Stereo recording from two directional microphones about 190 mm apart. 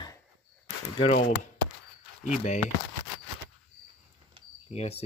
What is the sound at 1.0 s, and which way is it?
Speech, 35° left (ahead or behind).